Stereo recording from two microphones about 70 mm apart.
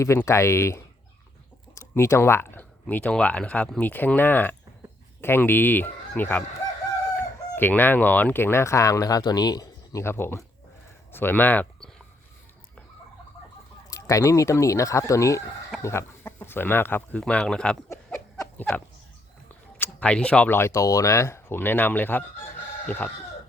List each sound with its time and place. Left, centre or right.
0.3 s speech: left
1.7 s a sound: left
2.9 s speech: centre
7.2 s chicken: left
10.0 s speech: left
13.9 s speech: left
15.8 s speech: left
17.2 s speech: centre
18.5 s a sound: centre
20.0 s speech: centre
20.5 s speech: left